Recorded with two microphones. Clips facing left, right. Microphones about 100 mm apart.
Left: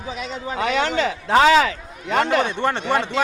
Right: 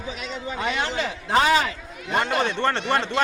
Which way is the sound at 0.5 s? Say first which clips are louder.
Left 6 dB; 90° left.